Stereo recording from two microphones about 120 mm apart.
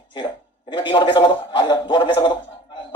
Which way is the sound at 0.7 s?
40° left (ahead or behind).